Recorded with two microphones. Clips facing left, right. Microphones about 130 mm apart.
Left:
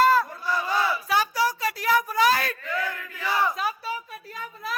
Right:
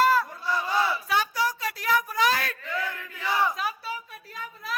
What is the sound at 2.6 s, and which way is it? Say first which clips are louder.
Chant: left 2 dB; 25° right (ahead or behind).